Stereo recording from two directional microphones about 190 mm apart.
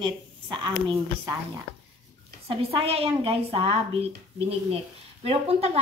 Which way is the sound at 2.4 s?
30° right (ahead or behind).